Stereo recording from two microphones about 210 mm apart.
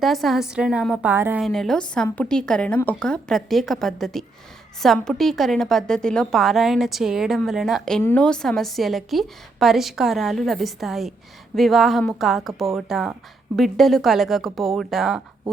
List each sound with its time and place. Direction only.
0.0 s a woman's voice: centre (ahead or behind)
1.5 s a woman's voice: centre (ahead or behind)